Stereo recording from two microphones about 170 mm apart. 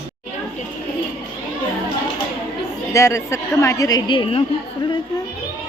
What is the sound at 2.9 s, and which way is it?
A woman's voice, 15° left (ahead or behind).